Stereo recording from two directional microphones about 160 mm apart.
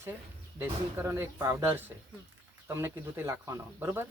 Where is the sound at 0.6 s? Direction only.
15° right (ahead or behind).